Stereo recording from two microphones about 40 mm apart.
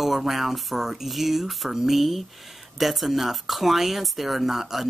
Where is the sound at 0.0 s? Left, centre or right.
Centre.